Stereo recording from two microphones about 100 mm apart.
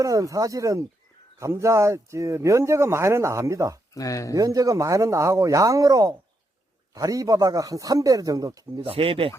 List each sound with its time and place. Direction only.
0.0 s a man's voice: 35° right (ahead or behind)
3.9 s speech: 35° left (ahead or behind)
4.4 s a man's voice: 35° right (ahead or behind)
8.8 s speech: 65° right (ahead or behind)